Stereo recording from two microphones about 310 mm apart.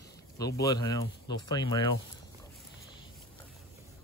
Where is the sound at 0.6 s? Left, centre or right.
Centre.